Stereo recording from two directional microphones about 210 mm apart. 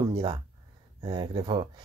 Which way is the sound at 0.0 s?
20° right (ahead or behind).